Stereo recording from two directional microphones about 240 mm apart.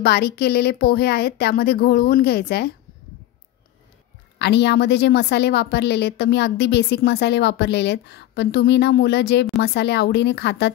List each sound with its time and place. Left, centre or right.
0.0 s a woman's voice: left
4.4 s a woman's voice: left